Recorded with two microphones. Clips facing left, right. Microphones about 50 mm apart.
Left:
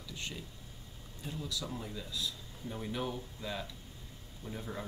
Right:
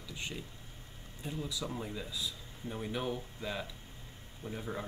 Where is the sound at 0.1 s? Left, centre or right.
Centre.